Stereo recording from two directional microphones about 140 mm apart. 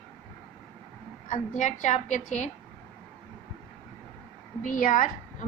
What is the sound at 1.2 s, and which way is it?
A woman's voice, 60° left (ahead or behind).